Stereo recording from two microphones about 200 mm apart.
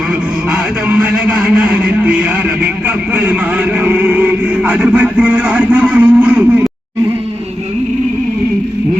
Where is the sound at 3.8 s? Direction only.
5° right (ahead or behind).